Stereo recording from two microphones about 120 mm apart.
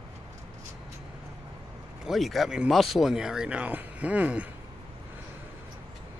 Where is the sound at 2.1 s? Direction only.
Centre (ahead or behind).